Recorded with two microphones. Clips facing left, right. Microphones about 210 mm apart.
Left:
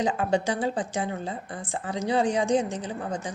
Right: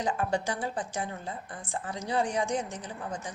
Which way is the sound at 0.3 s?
25° left (ahead or behind).